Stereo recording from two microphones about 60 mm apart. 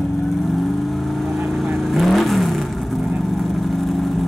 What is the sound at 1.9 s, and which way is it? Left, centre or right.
Vehicle, centre.